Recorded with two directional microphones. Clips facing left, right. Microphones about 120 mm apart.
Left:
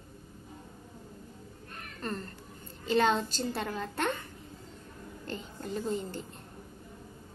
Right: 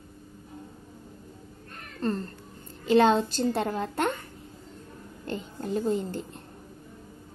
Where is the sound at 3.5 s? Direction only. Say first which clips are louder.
Right 6 dB; 30° right (ahead or behind).